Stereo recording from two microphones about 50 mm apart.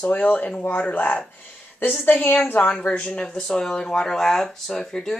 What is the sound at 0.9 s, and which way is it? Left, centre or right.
Speech, left.